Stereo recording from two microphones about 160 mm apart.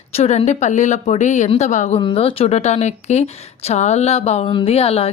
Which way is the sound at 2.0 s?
35° left (ahead or behind).